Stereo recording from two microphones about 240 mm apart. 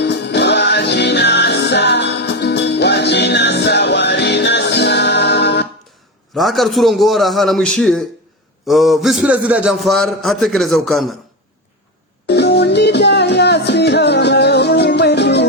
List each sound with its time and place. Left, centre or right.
0.0 s music: left
6.3 s a man's voice: centre
12.3 s music: left